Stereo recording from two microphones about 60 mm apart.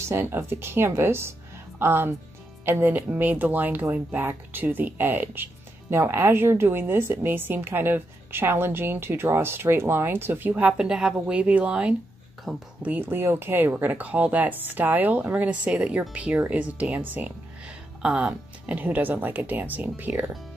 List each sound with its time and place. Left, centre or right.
0.1 s speech: right
10.8 s a woman's voice: centre
11.3 s speech: right
12.5 s speech: centre
13.0 s speech: right
18.0 s speech: centre
18.8 s speech: right